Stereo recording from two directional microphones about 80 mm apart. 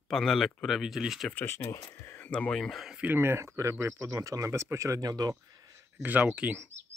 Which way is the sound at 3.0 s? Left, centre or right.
Right.